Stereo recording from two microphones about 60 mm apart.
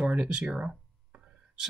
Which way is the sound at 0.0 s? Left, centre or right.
Right.